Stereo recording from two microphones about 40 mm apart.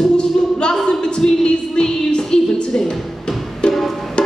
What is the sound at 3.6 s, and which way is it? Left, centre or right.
Music, left.